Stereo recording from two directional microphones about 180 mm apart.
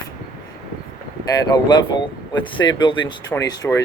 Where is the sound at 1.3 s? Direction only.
20° left (ahead or behind).